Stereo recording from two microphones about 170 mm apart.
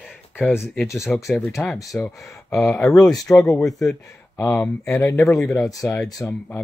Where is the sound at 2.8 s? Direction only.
20° left (ahead or behind).